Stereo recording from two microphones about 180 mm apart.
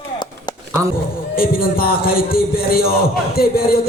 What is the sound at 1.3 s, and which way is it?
Music, 55° left (ahead or behind).